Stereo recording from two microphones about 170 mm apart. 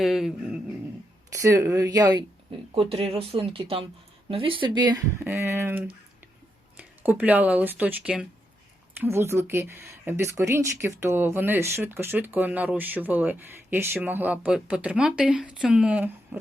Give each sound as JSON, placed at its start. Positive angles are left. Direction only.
{"t": 0.0, "sound": "a sound", "side_deg": 0}
{"t": 1.3, "sound": "speech", "side_deg": -20}
{"t": 2.7, "sound": "speech", "side_deg": -35}